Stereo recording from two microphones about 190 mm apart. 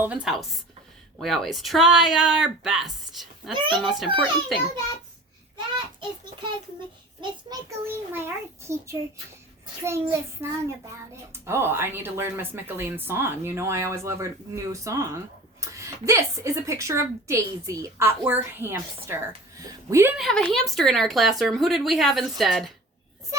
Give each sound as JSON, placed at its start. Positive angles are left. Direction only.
{"t": 0.0, "sound": "speech", "side_deg": -5}
{"t": 3.5, "sound": "a child's voice", "side_deg": -25}
{"t": 3.8, "sound": "speech", "side_deg": 0}
{"t": 5.5, "sound": "a sound", "side_deg": -25}
{"t": 7.2, "sound": "a woman's voice", "side_deg": -15}
{"t": 20.1, "sound": "speech", "side_deg": 0}